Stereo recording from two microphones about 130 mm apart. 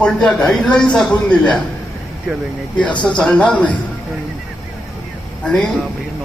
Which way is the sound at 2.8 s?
10° left (ahead or behind).